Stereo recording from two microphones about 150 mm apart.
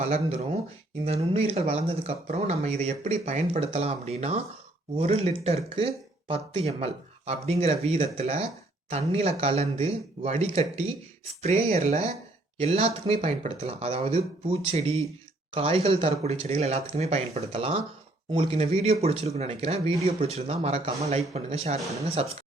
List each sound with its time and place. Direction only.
0.0 s speech: 45° right (ahead or behind)